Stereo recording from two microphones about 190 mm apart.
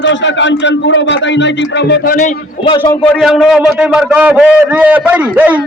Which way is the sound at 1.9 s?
45° left (ahead or behind).